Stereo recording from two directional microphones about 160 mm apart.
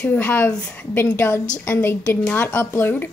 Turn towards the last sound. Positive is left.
turn(degrees=10)  # may be behind; listen again after turning